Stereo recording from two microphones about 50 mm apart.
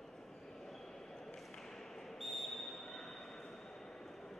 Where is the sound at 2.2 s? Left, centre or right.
Centre.